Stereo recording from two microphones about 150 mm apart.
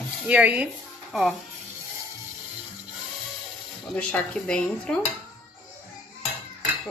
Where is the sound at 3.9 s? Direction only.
10° left (ahead or behind).